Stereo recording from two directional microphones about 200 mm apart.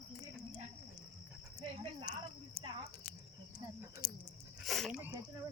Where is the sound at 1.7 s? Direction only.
25° right (ahead or behind).